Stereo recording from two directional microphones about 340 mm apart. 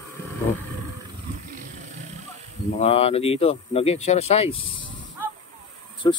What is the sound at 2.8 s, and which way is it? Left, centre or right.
Speech, centre.